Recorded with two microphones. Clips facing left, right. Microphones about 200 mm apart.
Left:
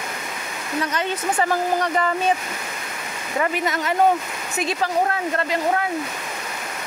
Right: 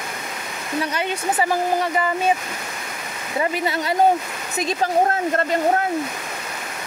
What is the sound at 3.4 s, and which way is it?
Speech, 30° right (ahead or behind).